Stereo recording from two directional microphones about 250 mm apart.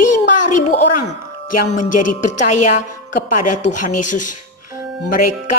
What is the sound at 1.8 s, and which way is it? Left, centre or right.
Speech, left.